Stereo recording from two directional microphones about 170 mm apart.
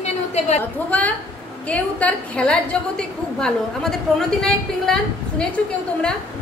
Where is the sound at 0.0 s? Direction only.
40° left (ahead or behind).